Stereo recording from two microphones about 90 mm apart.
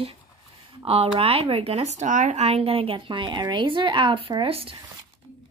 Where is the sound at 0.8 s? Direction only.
90° right.